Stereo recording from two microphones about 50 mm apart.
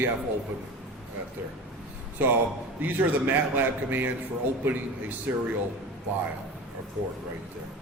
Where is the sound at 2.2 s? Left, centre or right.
Right.